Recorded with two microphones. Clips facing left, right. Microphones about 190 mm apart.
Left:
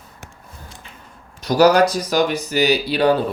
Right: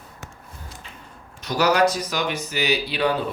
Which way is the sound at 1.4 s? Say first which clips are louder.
Left 6 dB; 35° left (ahead or behind).